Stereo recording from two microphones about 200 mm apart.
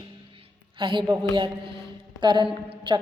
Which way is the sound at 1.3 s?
25° right (ahead or behind).